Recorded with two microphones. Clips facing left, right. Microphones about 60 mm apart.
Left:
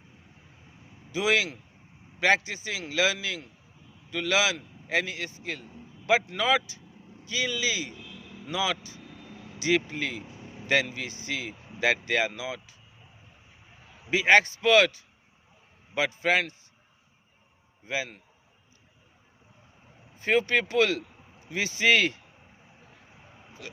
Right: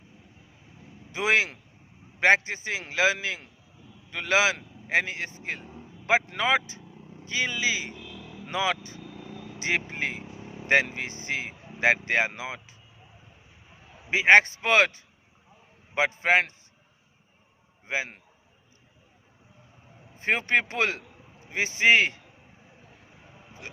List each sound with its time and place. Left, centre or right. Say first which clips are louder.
1.1 s a man's voice: right 1 dB; right
9.0 s vehicle: right 4 dB; right
9.6 s speech: left 2 dB; right
14.1 s speech: right 2 dB; right
17.8 s speech: right 1 dB; right
20.1 s speech: even; right
23.6 s speech: even; right